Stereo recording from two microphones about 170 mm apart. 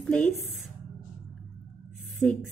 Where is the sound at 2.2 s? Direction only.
5° left (ahead or behind).